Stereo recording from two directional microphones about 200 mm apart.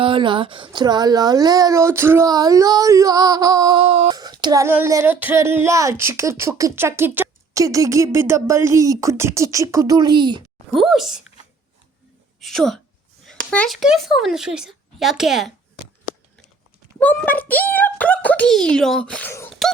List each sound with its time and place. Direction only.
0.0 s speech: 25° right (ahead or behind)
10.7 s speech: centre (ahead or behind)
12.4 s speech: centre (ahead or behind)
17.0 s a child's voice: 10° left (ahead or behind)